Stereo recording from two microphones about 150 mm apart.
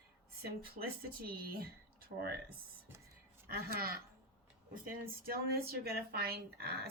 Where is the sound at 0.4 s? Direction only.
85° right.